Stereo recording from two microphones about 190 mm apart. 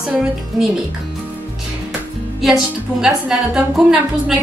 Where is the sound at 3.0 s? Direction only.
5° right (ahead or behind).